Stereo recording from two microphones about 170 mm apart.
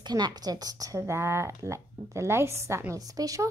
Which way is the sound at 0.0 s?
25° right (ahead or behind).